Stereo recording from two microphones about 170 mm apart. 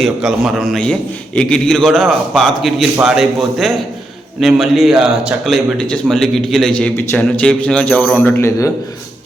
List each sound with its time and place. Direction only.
0.0 s a man's voice: 5° right (ahead or behind); by 8.7 s 15° left (ahead or behind)